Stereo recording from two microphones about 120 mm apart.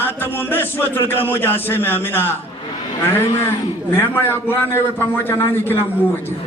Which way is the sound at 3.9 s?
15° left (ahead or behind).